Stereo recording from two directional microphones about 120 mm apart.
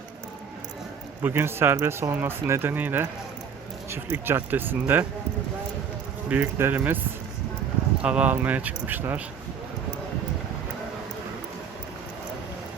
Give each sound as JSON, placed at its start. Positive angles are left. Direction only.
{"t": 1.2, "sound": "speech", "side_deg": -20}
{"t": 6.2, "sound": "speech", "side_deg": -15}
{"t": 8.0, "sound": "speech", "side_deg": -10}